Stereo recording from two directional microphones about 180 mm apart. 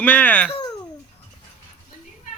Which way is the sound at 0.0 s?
10° left (ahead or behind).